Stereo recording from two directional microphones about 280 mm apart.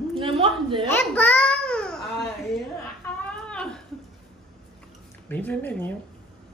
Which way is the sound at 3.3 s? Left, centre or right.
Centre.